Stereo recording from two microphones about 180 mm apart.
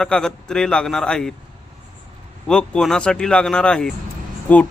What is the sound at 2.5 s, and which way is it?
Speech, 5° left (ahead or behind).